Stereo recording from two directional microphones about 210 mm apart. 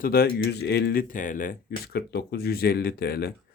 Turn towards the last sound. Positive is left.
turn(degrees=45)  # may be behind; listen again after turning